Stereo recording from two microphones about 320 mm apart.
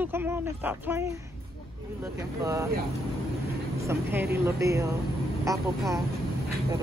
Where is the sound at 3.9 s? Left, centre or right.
Centre.